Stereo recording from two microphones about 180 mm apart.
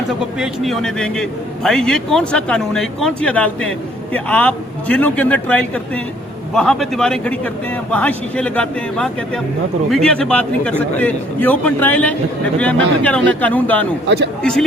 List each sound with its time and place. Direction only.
0.3 s a man's voice: centre (ahead or behind)